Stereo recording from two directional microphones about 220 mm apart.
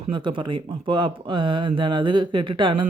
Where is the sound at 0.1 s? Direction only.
20° right (ahead or behind).